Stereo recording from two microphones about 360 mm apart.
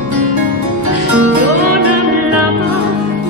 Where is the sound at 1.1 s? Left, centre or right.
Right.